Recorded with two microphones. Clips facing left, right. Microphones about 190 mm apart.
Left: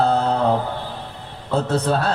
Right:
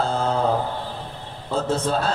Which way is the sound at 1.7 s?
65° left (ahead or behind).